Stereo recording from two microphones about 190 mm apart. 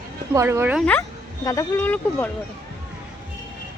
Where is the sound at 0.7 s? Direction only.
5° left (ahead or behind).